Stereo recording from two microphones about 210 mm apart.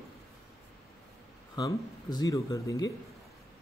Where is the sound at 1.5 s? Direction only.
20° left (ahead or behind).